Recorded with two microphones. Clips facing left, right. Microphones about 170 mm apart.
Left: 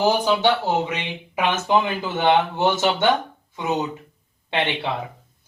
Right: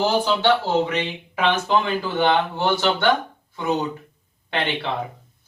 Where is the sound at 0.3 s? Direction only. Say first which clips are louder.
Even; 15° left (ahead or behind).